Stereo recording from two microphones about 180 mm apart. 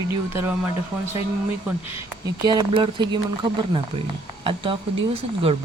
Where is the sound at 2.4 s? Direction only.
25° right (ahead or behind).